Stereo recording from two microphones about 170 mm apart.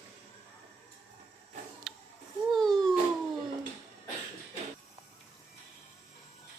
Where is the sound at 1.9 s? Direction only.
5° right (ahead or behind).